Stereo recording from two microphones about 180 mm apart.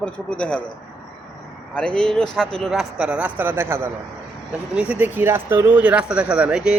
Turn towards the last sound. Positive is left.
turn(degrees=-5)  # may be behind; listen again after turning